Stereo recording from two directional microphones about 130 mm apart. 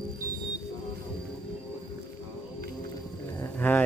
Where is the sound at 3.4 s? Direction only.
15° left (ahead or behind).